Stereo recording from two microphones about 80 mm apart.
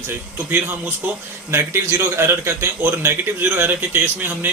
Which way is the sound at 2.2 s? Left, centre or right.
Right.